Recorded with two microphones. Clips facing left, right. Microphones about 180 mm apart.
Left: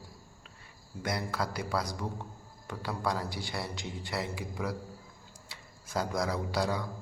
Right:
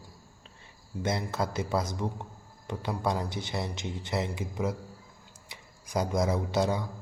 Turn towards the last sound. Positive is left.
turn(degrees=-20)  # may be behind; listen again after turning